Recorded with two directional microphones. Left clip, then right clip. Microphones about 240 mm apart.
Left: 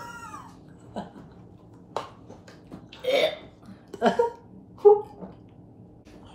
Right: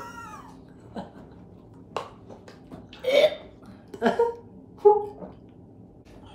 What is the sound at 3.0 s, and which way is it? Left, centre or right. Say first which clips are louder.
Burping: right 3 dB; centre.